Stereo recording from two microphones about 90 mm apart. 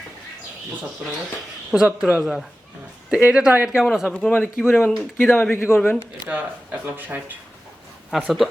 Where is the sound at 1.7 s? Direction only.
10° right (ahead or behind).